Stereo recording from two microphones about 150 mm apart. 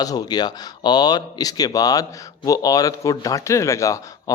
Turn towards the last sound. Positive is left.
turn(degrees=20)  # may be behind; listen again after turning